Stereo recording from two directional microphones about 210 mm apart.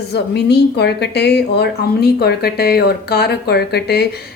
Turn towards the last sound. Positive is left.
turn(degrees=50)  # may be behind; listen again after turning